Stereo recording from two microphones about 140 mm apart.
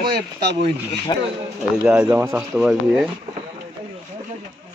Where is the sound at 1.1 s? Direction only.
30° left (ahead or behind).